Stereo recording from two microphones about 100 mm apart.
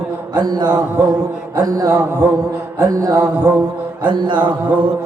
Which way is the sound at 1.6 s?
40° right (ahead or behind).